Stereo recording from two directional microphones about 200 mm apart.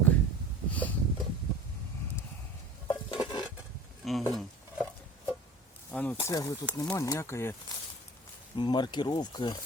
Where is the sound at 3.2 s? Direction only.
20° left (ahead or behind).